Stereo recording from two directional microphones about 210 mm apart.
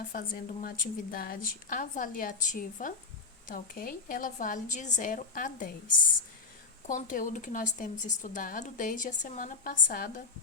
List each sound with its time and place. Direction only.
0.1 s speech: 40° left (ahead or behind)
6.8 s speech: 40° left (ahead or behind)